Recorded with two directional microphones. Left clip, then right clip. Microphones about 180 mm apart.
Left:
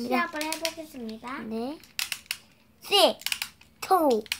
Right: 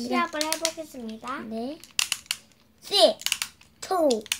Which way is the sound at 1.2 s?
20° right (ahead or behind).